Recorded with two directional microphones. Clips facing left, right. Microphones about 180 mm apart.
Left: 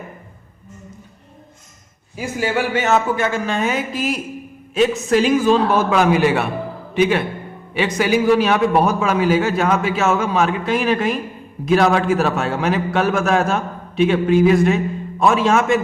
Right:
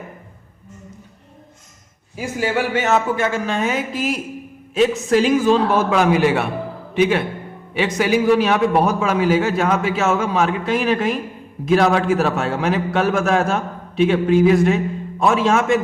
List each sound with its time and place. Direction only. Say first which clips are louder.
2.7 s a man's voice: left 1 dB; 15° right (ahead or behind)
3.2 s a man's voice: even; 30° right (ahead or behind)